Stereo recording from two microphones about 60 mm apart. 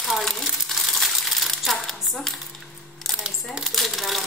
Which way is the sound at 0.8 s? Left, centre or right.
Centre.